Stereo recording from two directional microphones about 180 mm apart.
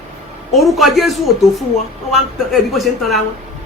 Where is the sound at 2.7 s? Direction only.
Centre (ahead or behind).